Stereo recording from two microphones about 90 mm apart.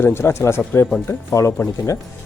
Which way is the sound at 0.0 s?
25° left (ahead or behind).